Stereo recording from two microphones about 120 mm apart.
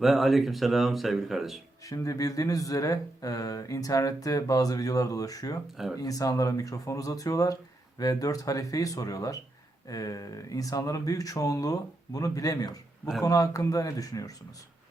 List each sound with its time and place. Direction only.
0.0 s speech: centre (ahead or behind)
1.9 s speech: 30° left (ahead or behind)